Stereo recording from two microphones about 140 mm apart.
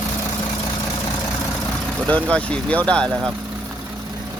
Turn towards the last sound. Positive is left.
turn(degrees=5)  # may be behind; listen again after turning